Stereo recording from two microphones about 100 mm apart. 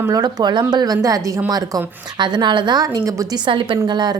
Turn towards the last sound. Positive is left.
turn(degrees=-45)  # may be behind; listen again after turning